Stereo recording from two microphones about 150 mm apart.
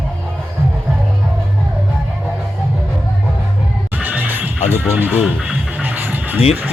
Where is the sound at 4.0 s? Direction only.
10° right (ahead or behind).